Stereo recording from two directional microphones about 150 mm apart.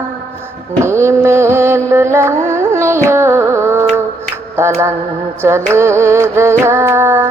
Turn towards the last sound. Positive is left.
turn(degrees=-15)  # may be behind; listen again after turning